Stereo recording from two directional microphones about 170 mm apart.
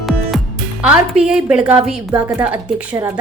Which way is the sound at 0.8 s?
5° right (ahead or behind).